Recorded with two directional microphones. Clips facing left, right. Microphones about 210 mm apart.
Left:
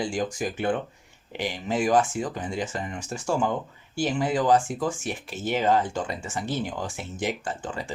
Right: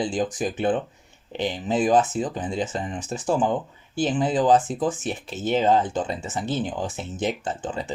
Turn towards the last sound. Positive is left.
turn(degrees=-20)  # may be behind; listen again after turning